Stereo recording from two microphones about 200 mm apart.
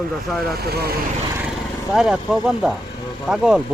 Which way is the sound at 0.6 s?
50° right (ahead or behind).